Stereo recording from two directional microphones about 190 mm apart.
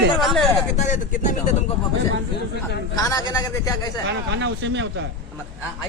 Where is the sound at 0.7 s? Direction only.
40° left (ahead or behind).